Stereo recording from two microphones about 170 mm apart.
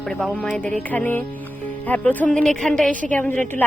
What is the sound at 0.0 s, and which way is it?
A woman's voice, 5° left (ahead or behind).